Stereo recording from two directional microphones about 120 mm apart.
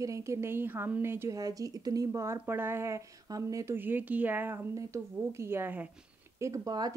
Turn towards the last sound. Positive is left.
turn(degrees=-30)  # may be behind; listen again after turning